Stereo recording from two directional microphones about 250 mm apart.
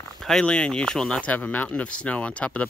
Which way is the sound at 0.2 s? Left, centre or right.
Centre.